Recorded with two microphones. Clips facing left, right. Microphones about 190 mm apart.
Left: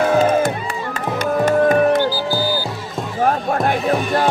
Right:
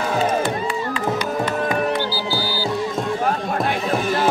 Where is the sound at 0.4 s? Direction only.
45° left (ahead or behind).